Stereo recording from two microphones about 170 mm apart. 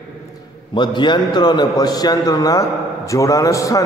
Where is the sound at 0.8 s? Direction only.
25° left (ahead or behind).